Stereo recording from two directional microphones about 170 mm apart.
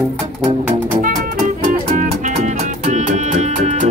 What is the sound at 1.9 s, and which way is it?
Music, 45° right (ahead or behind).